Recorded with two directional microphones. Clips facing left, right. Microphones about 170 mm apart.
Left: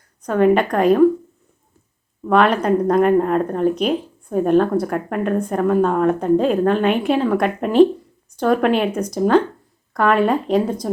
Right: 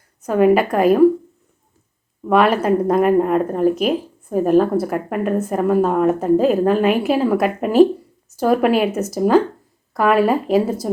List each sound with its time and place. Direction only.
0.2 s speech: 5° right (ahead or behind)
2.2 s speech: 5° right (ahead or behind)